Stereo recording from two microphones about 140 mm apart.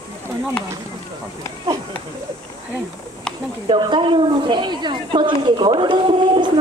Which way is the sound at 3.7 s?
35° right (ahead or behind).